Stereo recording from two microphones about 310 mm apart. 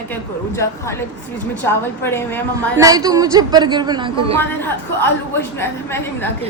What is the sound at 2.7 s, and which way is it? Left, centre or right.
A woman's voice, centre.